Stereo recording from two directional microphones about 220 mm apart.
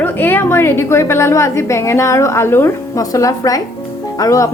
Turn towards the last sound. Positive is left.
turn(degrees=15)  # may be behind; listen again after turning